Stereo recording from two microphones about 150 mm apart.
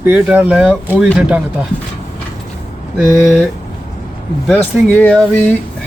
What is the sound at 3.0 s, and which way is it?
Speech, 5° right (ahead or behind).